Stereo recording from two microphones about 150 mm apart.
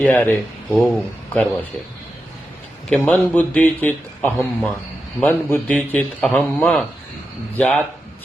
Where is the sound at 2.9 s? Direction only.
10° left (ahead or behind).